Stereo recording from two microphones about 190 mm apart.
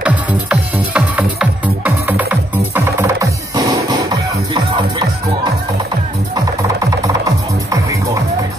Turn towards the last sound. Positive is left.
turn(degrees=-15)  # may be behind; listen again after turning